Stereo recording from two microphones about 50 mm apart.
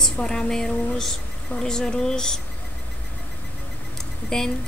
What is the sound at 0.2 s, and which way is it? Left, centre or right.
Speech, centre.